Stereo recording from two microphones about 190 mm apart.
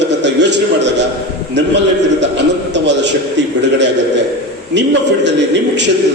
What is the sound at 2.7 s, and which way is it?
A man's voice, 70° right (ahead or behind).